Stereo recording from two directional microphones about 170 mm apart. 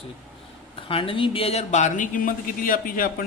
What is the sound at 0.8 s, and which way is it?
Speech, 30° left (ahead or behind).